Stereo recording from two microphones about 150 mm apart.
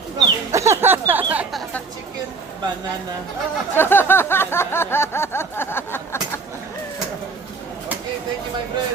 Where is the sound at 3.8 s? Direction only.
15° left (ahead or behind).